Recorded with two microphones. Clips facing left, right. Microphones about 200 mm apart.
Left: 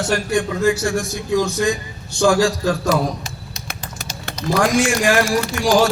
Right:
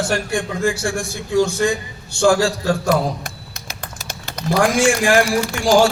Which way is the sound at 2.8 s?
55° right (ahead or behind).